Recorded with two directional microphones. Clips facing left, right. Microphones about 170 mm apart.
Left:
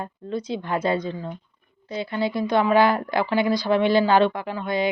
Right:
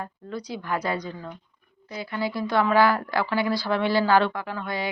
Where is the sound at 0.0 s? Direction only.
25° left (ahead or behind).